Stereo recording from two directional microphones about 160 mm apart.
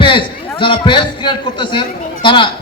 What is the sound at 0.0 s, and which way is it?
A man's voice, 30° left (ahead or behind).